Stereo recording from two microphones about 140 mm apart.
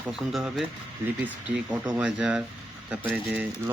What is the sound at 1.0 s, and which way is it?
Speech, 20° right (ahead or behind).